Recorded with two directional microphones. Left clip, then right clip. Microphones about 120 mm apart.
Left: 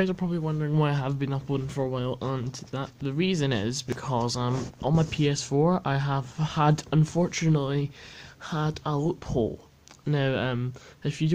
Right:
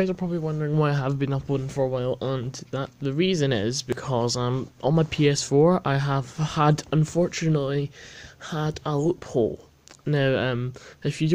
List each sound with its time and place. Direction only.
0.0 s speech: 20° right (ahead or behind)
7.0 s speech: 5° right (ahead or behind); by 11.3 s 30° right (ahead or behind)